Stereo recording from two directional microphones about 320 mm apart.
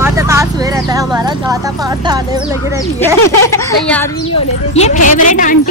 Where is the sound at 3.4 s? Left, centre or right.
Centre.